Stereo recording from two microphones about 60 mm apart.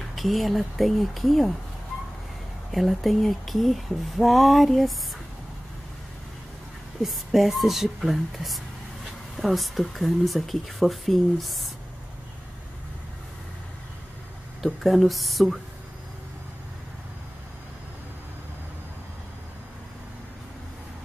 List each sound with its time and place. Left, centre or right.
0.1 s speech: centre
2.7 s speech: centre
7.0 s speech: centre
14.6 s speech: centre